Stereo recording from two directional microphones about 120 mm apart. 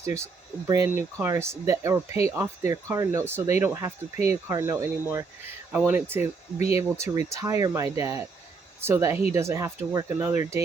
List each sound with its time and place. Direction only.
0.7 s speech: 30° right (ahead or behind)